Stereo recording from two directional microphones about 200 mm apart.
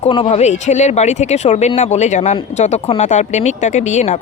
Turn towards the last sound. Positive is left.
turn(degrees=35)  # may be behind; listen again after turning